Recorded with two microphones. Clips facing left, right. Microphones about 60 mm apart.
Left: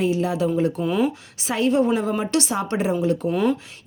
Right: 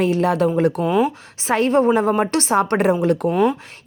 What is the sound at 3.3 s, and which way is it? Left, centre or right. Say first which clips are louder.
Speech: right 3 dB; centre.